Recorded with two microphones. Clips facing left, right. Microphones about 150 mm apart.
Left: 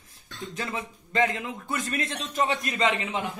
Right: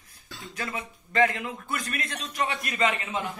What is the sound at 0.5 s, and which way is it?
Speech, 25° left (ahead or behind).